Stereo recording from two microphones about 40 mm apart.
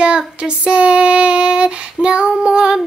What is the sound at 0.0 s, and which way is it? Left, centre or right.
Child singing, right.